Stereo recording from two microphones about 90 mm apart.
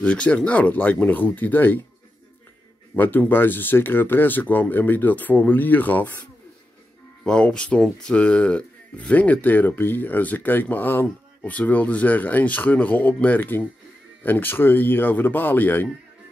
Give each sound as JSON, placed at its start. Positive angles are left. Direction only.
{"t": 0.0, "sound": "speech", "side_deg": 15}
{"t": 3.0, "sound": "speech", "side_deg": 20}
{"t": 7.2, "sound": "speech", "side_deg": 10}